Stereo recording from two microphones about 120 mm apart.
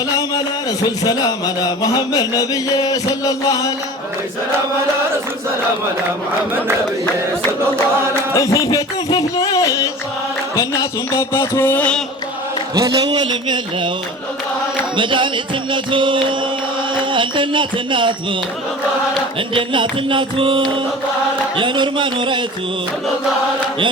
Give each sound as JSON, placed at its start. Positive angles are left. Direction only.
{"t": 0.2, "sound": "speech", "side_deg": 35}
{"t": 8.3, "sound": "music", "side_deg": 25}
{"t": 12.7, "sound": "a man's voice", "side_deg": -30}
{"t": 14.9, "sound": "music", "side_deg": -40}
{"t": 16.9, "sound": "speech", "side_deg": -45}
{"t": 19.5, "sound": "music", "side_deg": -45}